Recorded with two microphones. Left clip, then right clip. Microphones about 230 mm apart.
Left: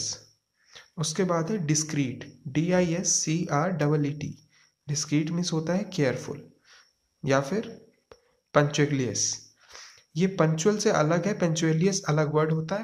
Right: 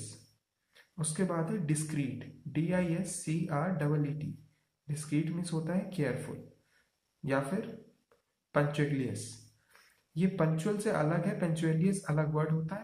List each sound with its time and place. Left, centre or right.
0.7 s speech: left
7.2 s speech: left